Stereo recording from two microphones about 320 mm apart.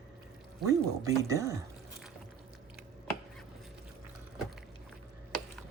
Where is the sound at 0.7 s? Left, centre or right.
Centre.